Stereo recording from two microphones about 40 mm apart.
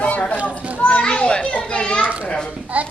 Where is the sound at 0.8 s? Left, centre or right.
Left.